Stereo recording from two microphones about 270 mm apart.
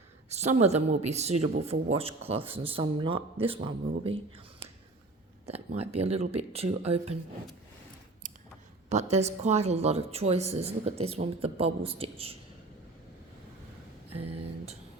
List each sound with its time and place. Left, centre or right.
0.3 s speech: right
5.5 s speech: right
8.9 s speech: right
14.1 s a sound: right